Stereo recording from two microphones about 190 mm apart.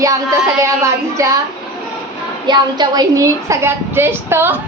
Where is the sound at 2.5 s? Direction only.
20° right (ahead or behind).